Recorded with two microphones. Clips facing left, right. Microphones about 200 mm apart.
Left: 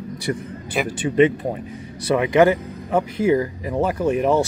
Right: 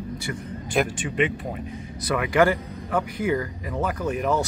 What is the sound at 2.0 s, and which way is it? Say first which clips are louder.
Speech: left 5 dB; 25° left (ahead or behind).